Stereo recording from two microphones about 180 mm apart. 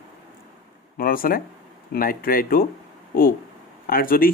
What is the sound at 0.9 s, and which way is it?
Speech, 50° left (ahead or behind).